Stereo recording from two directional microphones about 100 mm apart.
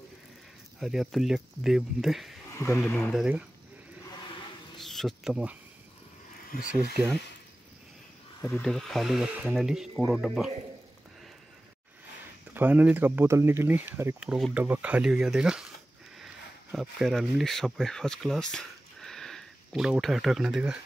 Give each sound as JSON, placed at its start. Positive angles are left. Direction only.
{"t": 0.7, "sound": "speech", "side_deg": -5}
{"t": 2.5, "sound": "speech", "side_deg": 30}
{"t": 2.8, "sound": "speech", "side_deg": 10}
{"t": 3.1, "sound": "speech", "side_deg": -10}
{"t": 4.7, "sound": "insect", "side_deg": 5}
{"t": 8.5, "sound": "speech", "side_deg": 5}
{"t": 12.5, "sound": "speech", "side_deg": -15}
{"t": 14.2, "sound": "speech", "side_deg": -5}
{"t": 14.6, "sound": "speech", "side_deg": -15}
{"t": 16.7, "sound": "speech", "side_deg": 0}